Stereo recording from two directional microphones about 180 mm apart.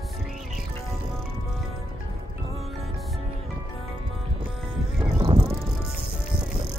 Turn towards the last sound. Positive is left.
turn(degrees=-30)  # may be behind; listen again after turning